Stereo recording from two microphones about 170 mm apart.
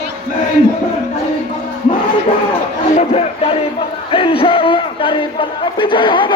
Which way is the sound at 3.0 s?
35° left (ahead or behind).